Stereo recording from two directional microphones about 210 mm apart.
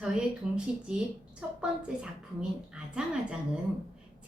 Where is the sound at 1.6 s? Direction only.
5° right (ahead or behind).